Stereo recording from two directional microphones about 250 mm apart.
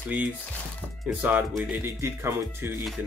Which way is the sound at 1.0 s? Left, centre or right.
Centre.